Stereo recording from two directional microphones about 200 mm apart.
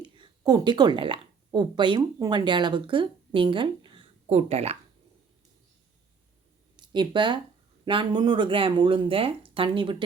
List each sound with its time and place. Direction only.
0.0 s a woman's voice: 20° right (ahead or behind)
6.7 s speech: 20° right (ahead or behind)